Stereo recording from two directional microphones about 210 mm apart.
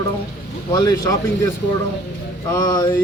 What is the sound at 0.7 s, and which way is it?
Speech, 15° left (ahead or behind).